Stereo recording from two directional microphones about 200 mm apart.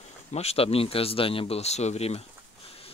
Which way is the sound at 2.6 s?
30° left (ahead or behind).